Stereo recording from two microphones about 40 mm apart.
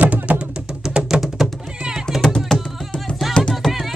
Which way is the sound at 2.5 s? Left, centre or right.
Centre.